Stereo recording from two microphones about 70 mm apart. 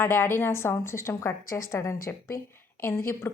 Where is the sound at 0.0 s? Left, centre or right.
Left.